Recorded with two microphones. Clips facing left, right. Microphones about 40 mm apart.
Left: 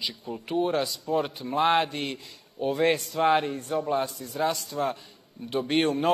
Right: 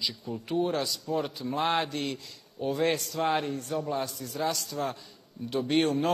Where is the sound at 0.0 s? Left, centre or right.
Left.